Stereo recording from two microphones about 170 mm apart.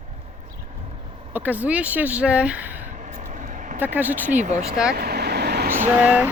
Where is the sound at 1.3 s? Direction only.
10° right (ahead or behind).